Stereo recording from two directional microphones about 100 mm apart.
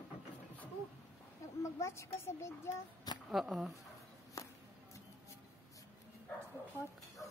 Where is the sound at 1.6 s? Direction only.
30° left (ahead or behind).